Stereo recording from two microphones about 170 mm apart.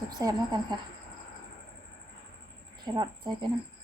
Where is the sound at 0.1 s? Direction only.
20° right (ahead or behind).